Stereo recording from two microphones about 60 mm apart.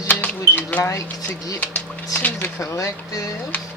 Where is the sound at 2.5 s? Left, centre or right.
Left.